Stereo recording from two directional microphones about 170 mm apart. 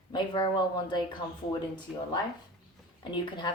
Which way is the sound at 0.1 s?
25° left (ahead or behind).